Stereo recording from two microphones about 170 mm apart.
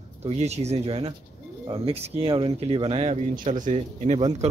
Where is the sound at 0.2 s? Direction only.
40° right (ahead or behind).